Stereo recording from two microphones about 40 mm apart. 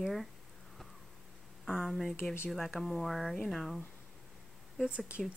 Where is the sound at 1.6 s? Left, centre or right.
Centre.